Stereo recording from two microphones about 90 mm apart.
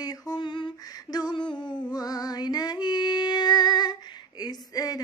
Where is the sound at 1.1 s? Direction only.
50° left (ahead or behind).